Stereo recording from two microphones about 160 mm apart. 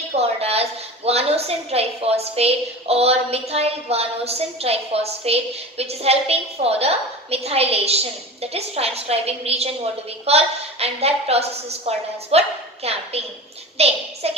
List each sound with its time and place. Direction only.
0.1 s a woman's voice: 40° right (ahead or behind)